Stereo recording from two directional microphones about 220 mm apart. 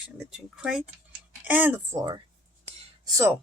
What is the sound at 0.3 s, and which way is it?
Speech, 5° right (ahead or behind).